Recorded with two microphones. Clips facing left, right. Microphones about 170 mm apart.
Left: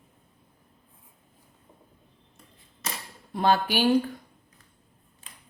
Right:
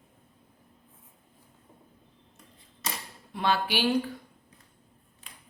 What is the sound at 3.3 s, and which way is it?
Speech, 45° left (ahead or behind).